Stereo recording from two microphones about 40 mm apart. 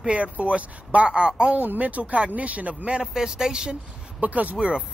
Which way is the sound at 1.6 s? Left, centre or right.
Right.